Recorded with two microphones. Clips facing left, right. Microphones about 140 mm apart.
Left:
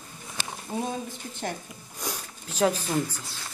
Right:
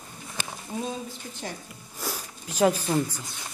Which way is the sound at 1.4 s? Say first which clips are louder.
Left 4 dB; 50° left (ahead or behind).